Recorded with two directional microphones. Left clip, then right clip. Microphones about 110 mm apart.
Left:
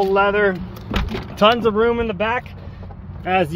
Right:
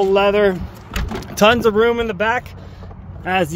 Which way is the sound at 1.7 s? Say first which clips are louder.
Right 2 dB; 75° right (ahead or behind).